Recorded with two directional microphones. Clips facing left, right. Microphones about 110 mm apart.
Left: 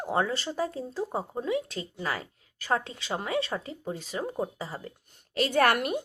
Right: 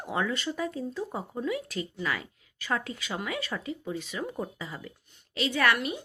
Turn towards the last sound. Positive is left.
turn(degrees=55)  # may be behind; listen again after turning